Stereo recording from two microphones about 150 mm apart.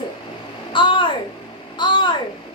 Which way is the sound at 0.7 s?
35° left (ahead or behind).